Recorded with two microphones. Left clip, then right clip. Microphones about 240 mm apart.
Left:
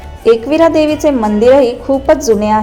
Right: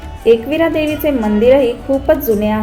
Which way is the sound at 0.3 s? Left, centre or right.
Centre.